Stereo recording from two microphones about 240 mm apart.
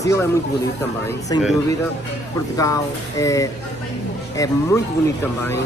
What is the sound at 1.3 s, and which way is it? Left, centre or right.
Speech, centre.